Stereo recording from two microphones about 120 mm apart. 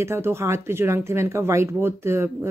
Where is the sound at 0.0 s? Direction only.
20° right (ahead or behind).